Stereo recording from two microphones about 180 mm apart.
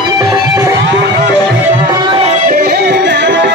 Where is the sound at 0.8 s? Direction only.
70° right (ahead or behind).